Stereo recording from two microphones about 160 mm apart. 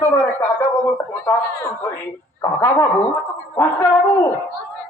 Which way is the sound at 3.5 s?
15° left (ahead or behind).